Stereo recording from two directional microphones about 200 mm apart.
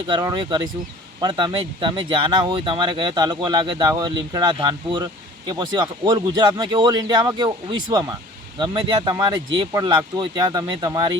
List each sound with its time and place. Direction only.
0.1 s speech: 20° right (ahead or behind)